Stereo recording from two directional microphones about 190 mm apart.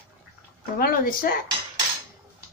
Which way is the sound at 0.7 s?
50° left (ahead or behind).